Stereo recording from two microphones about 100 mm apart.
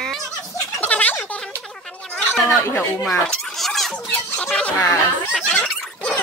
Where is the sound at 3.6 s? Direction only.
Centre (ahead or behind).